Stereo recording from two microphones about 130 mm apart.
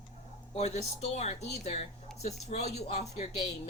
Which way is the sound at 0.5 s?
60° left (ahead or behind).